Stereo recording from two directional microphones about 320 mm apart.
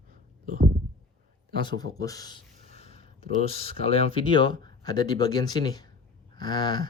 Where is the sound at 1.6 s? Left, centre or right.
Centre.